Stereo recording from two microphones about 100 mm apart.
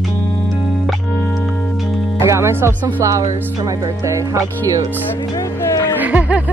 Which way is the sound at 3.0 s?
30° right (ahead or behind).